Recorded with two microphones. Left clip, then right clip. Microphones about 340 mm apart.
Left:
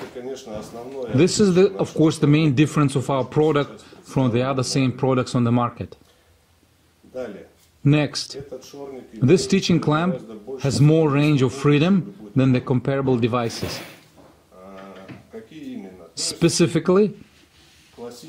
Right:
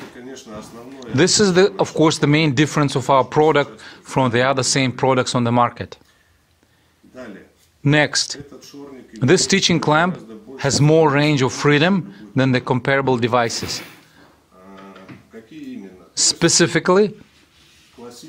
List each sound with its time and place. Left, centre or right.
1.1 s speech: centre
7.8 s speech: right
16.2 s speech: centre